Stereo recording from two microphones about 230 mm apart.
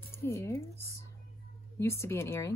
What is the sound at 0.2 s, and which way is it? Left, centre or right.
Speech, centre.